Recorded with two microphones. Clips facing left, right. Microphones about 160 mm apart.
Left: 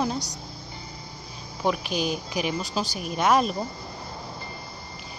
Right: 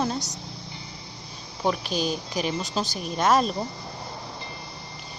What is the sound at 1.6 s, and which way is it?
A woman's voice, 10° left (ahead or behind).